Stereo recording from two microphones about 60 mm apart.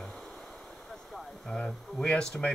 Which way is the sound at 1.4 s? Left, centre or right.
Centre.